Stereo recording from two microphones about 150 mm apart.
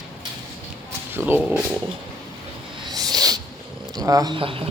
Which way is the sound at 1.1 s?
15° right (ahead or behind).